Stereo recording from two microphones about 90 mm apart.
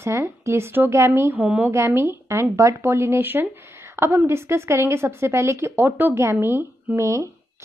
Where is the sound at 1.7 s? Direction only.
30° right (ahead or behind).